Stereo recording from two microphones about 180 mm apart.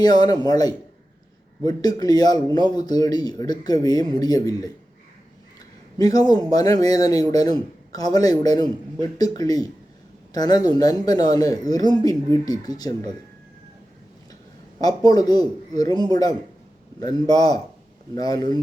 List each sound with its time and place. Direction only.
0.0 s speech: 20° left (ahead or behind)
6.0 s speech: 20° left (ahead or behind)
14.8 s speech: 20° left (ahead or behind)